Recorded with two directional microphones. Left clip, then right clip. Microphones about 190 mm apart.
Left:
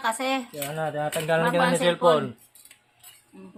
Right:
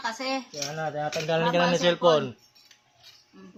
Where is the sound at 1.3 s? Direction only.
10° right (ahead or behind).